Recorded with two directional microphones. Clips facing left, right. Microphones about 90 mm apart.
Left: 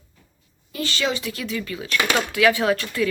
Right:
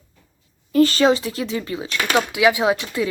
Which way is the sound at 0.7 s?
40° right (ahead or behind).